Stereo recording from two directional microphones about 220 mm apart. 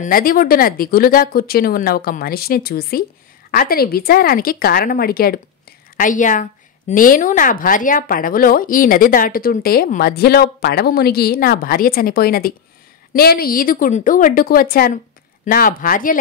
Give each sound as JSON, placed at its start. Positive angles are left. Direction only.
{"t": 0.0, "sound": "speech", "side_deg": 40}